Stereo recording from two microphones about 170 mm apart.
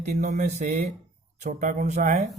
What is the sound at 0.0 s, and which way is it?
Speech, 45° right (ahead or behind).